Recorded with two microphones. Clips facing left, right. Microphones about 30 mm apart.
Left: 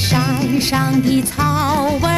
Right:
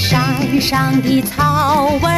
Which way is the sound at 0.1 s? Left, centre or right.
Centre.